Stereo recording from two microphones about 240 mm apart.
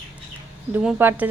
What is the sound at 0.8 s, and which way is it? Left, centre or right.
Speech, centre.